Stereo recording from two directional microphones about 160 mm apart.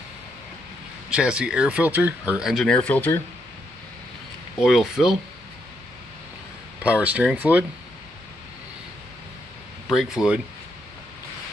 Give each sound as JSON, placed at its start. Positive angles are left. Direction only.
{"t": 1.1, "sound": "speech", "side_deg": -5}
{"t": 4.6, "sound": "speech", "side_deg": 0}
{"t": 6.8, "sound": "speech", "side_deg": -10}
{"t": 9.8, "sound": "speech", "side_deg": -5}